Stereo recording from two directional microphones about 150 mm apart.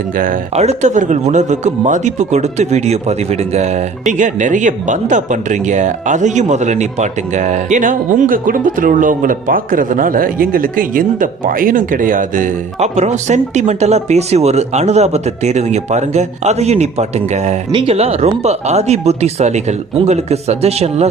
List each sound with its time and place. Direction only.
0.5 s speech: 45° right (ahead or behind)
17.7 s speech: 35° right (ahead or behind)